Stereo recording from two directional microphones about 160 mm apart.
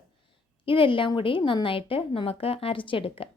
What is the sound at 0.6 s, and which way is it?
A woman's voice, 30° left (ahead or behind).